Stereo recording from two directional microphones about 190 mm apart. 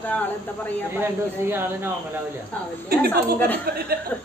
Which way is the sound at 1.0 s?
10° right (ahead or behind).